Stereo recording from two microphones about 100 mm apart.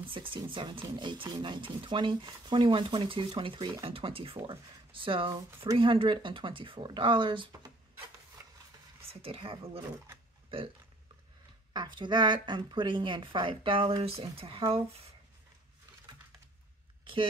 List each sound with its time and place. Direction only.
0.0 s speech: 60° right (ahead or behind)
8.4 s a sound: 25° right (ahead or behind)
9.1 s speech: 75° right (ahead or behind)
11.7 s a woman's voice: 50° right (ahead or behind)
14.0 s speech: 75° right (ahead or behind)
17.0 s a sound: 60° right (ahead or behind)